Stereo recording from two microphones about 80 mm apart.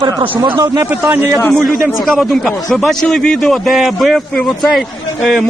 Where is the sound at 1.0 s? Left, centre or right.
Right.